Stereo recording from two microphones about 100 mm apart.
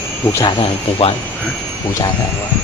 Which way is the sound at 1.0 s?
85° left.